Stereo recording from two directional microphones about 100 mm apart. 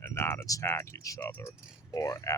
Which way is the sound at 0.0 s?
25° left (ahead or behind).